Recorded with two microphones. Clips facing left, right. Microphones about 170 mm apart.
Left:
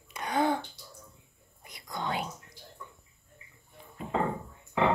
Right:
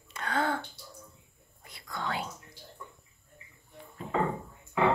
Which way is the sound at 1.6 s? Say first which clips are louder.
Left 1 dB; 20° left (ahead or behind).